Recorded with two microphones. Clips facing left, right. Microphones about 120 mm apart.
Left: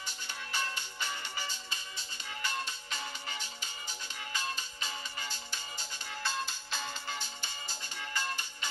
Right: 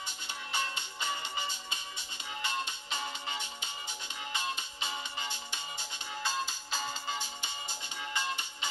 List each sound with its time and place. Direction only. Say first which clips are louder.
0.5 s music: right 2 dB; 20° right (ahead or behind)
4.7 s music: right 3 dB; 20° right (ahead or behind)